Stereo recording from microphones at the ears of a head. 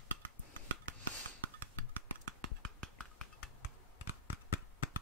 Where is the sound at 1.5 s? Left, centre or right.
Right.